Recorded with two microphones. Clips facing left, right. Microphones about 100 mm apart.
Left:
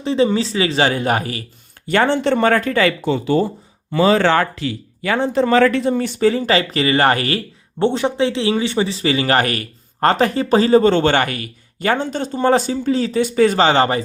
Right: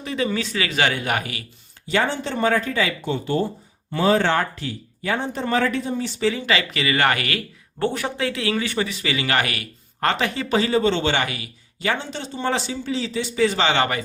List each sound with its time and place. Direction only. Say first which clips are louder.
0.0 s speech: left 8 dB; 30° left (ahead or behind)
1.9 s speech: left 7 dB; 60° left (ahead or behind); by 14.0 s 35° left (ahead or behind)